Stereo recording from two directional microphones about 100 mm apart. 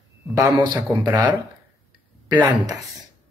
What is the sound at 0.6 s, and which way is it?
Speech, 50° right (ahead or behind).